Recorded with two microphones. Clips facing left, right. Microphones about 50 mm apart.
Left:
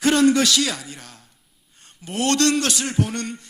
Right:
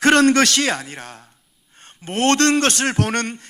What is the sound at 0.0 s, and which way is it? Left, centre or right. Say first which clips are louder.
A man's voice: right 3 dB; right.